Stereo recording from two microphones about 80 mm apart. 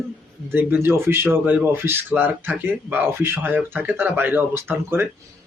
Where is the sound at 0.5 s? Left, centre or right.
Right.